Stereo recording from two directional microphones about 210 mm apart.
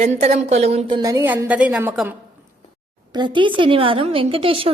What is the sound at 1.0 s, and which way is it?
A woman's voice, 15° right (ahead or behind).